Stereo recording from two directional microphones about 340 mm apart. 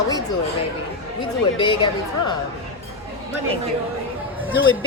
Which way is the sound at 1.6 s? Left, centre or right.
Centre.